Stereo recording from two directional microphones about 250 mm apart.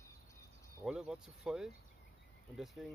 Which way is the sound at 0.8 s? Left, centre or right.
Centre.